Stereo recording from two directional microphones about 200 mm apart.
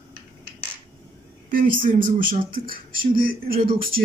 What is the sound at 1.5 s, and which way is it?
Speech, 45° right (ahead or behind).